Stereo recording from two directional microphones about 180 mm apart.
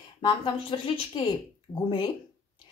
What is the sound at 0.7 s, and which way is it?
A woman's voice, 30° left (ahead or behind).